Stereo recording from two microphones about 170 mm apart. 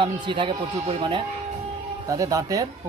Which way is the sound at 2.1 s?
20° right (ahead or behind).